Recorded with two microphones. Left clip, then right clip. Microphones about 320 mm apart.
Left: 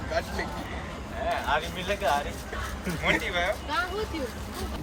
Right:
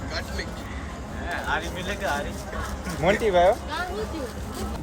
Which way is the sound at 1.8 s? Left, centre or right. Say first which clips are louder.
Left 1 dB; centre.